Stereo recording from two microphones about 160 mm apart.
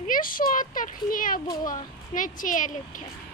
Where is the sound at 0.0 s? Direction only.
60° left (ahead or behind).